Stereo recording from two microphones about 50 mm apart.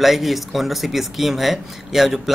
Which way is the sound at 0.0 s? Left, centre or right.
Centre.